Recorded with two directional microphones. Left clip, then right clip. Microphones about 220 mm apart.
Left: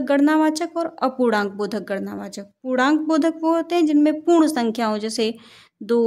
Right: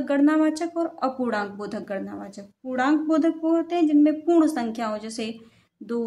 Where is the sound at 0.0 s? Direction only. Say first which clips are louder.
Left 3 dB; 45° left (ahead or behind).